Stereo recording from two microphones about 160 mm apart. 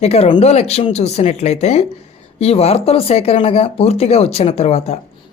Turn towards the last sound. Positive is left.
turn(degrees=45)  # may be behind; listen again after turning